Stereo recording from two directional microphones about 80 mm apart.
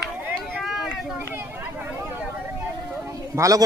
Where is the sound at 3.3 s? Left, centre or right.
Right.